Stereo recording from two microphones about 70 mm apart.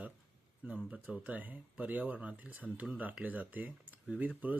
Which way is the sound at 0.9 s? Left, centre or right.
Centre.